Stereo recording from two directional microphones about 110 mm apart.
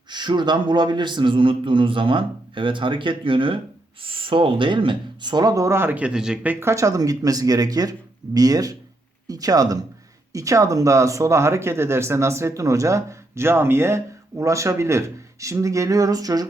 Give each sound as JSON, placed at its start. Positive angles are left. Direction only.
{"t": 0.1, "sound": "a man's voice", "side_deg": -45}